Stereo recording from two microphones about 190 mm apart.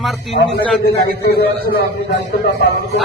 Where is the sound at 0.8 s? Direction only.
55° left (ahead or behind).